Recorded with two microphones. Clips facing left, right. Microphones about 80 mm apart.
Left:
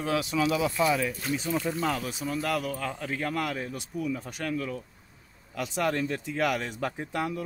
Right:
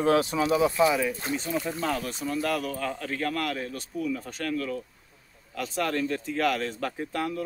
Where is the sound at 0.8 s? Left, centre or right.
Centre.